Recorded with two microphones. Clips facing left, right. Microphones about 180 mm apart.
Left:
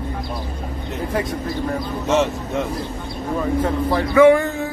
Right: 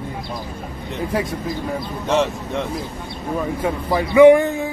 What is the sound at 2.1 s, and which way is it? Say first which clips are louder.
Speech: even; centre (ahead or behind).